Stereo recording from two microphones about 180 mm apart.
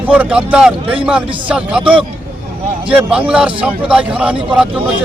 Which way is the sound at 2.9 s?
5° right (ahead or behind).